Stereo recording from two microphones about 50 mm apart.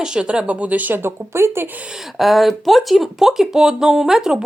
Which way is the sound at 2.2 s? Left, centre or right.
Centre.